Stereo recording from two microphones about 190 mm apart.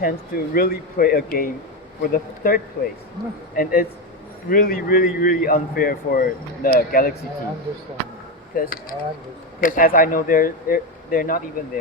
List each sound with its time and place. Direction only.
0.0 s a man's voice: 50° left (ahead or behind)
8.5 s a man's voice: 50° left (ahead or behind)